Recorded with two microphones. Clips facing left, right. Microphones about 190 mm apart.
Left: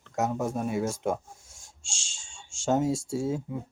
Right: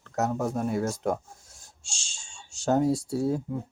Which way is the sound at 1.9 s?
90° left.